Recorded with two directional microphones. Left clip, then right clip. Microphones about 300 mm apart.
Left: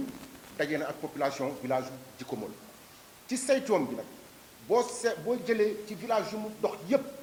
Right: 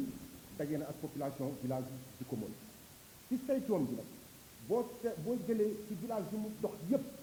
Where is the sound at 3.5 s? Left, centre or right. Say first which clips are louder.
Left 9 dB; centre.